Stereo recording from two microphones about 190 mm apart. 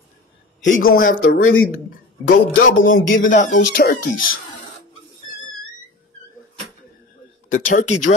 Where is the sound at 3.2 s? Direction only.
40° left (ahead or behind).